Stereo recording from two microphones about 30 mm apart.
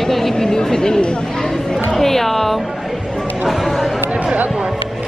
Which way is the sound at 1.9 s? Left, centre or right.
Centre.